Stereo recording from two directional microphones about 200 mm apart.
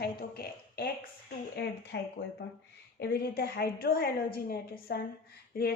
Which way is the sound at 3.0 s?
55° left (ahead or behind).